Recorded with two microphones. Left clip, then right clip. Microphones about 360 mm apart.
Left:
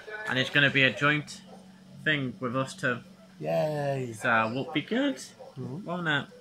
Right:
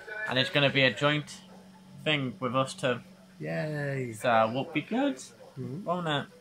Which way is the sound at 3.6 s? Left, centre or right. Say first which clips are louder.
Left 5 dB; left.